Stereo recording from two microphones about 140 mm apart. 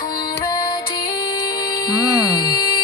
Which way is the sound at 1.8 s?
30° left (ahead or behind).